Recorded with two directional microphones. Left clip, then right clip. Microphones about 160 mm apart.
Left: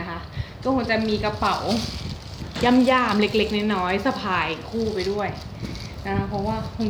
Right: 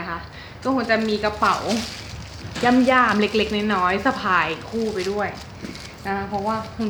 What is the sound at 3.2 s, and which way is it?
Speech, 10° left (ahead or behind).